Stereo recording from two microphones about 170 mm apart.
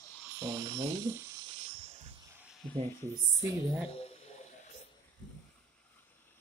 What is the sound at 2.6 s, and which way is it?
Speech, 5° left (ahead or behind).